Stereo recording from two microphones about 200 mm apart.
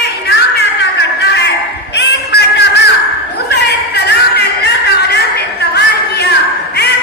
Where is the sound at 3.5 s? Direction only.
55° left (ahead or behind).